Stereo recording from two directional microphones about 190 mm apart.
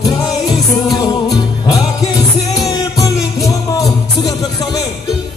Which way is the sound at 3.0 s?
15° left (ahead or behind).